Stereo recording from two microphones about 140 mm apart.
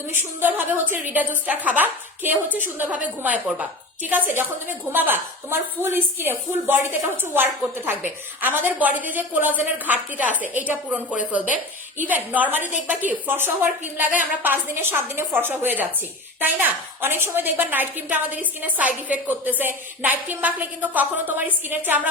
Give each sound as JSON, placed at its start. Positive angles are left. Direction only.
{"t": 0.1, "sound": "a woman's voice", "side_deg": -15}